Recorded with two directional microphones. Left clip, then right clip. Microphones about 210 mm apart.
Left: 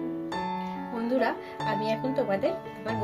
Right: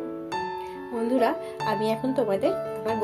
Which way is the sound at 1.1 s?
25° right (ahead or behind).